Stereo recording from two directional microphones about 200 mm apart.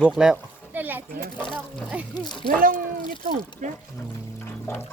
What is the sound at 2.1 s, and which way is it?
Speech, 20° left (ahead or behind).